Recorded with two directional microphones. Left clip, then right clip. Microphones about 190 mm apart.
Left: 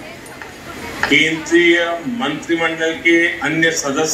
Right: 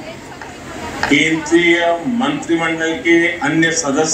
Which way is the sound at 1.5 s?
40° right (ahead or behind).